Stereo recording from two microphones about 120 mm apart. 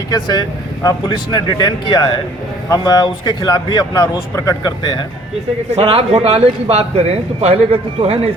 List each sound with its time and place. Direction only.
0.1 s speech: 35° left (ahead or behind)
5.7 s speech: 55° right (ahead or behind)